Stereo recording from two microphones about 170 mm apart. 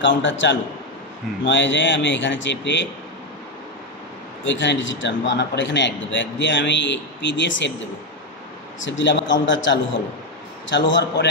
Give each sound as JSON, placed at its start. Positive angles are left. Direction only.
{"t": 0.0, "sound": "a man's voice", "side_deg": 90}
{"t": 4.5, "sound": "a man's voice", "side_deg": 90}
{"t": 8.8, "sound": "a man's voice", "side_deg": 90}